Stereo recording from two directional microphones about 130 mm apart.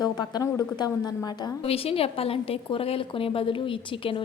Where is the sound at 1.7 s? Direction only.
50° left (ahead or behind).